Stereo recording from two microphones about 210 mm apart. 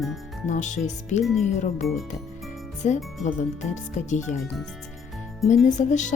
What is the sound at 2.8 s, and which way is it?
Speech, 35° left (ahead or behind).